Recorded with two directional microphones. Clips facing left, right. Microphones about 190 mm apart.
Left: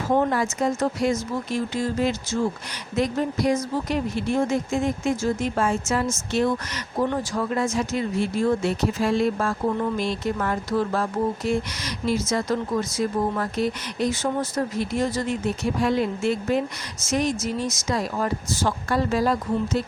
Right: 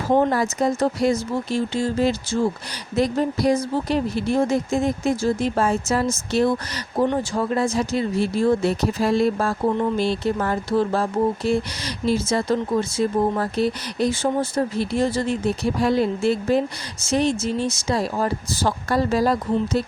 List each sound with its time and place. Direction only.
0.1 s speech: 35° right (ahead or behind)